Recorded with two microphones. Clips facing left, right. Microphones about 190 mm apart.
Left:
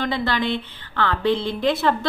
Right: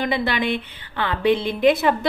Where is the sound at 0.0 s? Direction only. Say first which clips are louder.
Right 1 dB; 15° right (ahead or behind).